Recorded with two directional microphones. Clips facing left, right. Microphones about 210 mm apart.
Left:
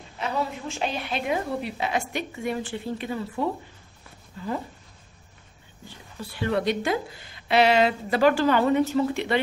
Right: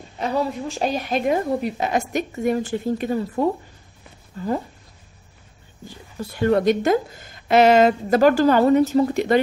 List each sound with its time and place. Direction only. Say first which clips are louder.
0.2 s a woman's voice: right 5 dB; 40° right (ahead or behind)
6.3 s a woman's voice: right 7 dB; 45° right (ahead or behind)